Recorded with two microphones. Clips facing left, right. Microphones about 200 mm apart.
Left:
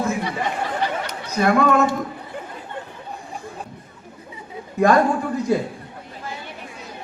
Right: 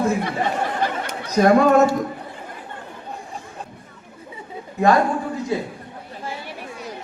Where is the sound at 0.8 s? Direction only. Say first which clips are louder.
Right 1 dB; 45° right (ahead or behind).